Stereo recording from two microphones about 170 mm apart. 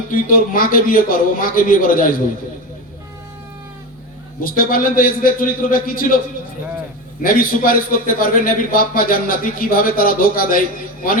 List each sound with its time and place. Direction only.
0.1 s a man's voice: 55° left (ahead or behind)
4.4 s a man's voice: 55° left (ahead or behind)
7.2 s a man's voice: 55° left (ahead or behind)